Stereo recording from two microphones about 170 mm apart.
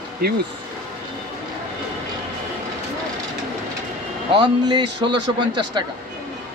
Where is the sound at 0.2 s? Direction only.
65° right (ahead or behind).